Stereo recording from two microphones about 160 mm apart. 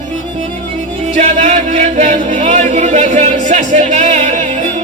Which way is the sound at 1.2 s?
45° right (ahead or behind).